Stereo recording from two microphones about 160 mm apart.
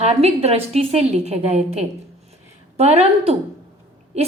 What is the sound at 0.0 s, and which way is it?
A woman's voice, 40° right (ahead or behind).